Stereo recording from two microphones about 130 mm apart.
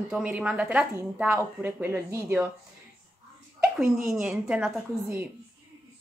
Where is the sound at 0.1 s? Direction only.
10° right (ahead or behind).